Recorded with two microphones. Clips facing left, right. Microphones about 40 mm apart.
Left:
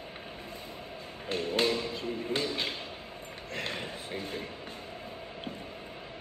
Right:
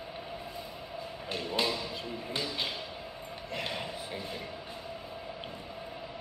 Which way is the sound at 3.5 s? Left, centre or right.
Right.